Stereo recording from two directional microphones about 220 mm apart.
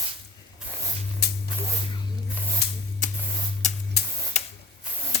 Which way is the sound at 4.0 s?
45° left (ahead or behind).